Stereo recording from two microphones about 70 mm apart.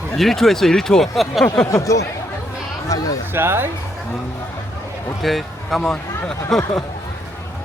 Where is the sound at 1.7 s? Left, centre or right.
Left.